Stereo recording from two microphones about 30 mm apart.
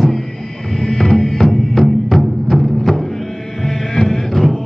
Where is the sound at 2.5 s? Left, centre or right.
Centre.